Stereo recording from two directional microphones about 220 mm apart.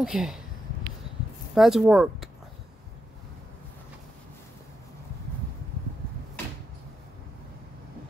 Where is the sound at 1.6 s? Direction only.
Centre (ahead or behind).